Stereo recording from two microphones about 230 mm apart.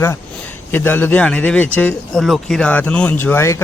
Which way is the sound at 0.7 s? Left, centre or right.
Centre.